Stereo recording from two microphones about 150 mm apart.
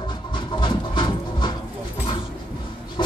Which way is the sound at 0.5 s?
30° left (ahead or behind).